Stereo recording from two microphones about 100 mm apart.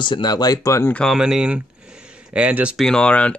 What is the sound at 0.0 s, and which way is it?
Speech, 50° left (ahead or behind).